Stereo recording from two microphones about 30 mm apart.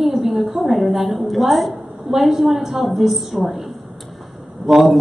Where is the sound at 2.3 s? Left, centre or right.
Centre.